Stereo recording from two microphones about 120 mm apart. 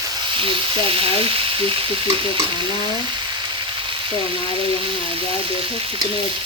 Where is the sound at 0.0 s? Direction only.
35° right (ahead or behind).